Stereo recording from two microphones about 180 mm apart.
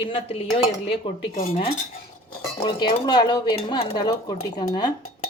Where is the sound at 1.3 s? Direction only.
50° left (ahead or behind).